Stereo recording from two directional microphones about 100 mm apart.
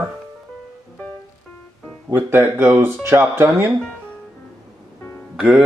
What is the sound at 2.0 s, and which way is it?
Speech, 20° right (ahead or behind).